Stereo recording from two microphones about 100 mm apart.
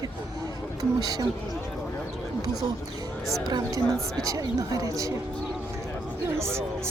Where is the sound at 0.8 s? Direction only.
40° right (ahead or behind).